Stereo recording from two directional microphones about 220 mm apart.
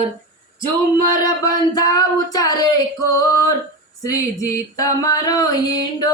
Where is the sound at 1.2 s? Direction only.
15° left (ahead or behind).